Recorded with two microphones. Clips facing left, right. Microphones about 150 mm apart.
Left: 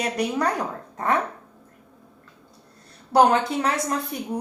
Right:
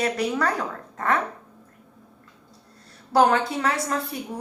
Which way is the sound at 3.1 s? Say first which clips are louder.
Left 1 dB; 20° left (ahead or behind).